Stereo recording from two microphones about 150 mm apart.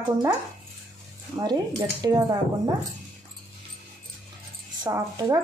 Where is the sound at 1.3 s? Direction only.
25° right (ahead or behind).